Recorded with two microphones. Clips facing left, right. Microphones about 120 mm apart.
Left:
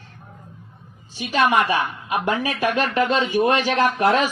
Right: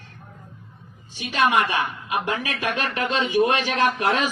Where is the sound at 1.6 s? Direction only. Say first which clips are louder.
Left 3 dB; 45° left (ahead or behind).